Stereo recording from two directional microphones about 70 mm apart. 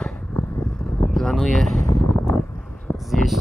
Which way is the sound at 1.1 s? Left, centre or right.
Centre.